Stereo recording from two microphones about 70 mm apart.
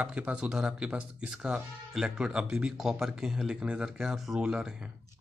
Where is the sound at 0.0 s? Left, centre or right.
Centre.